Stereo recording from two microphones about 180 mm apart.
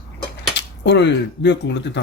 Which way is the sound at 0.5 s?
75° left (ahead or behind).